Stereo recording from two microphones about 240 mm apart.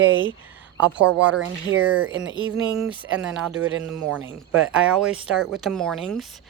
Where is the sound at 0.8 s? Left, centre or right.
Centre.